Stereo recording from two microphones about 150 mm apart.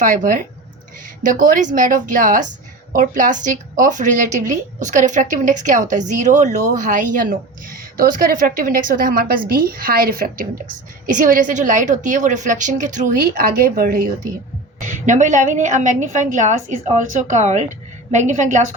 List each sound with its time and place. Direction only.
0.0 s a woman's voice: 60° right (ahead or behind); by 14.1 s 90° right
15.0 s a woman's voice: 55° right (ahead or behind)